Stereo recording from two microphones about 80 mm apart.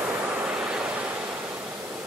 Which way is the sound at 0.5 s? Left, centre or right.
Centre.